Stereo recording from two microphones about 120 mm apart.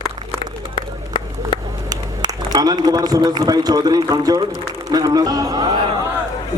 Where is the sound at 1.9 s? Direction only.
35° right (ahead or behind).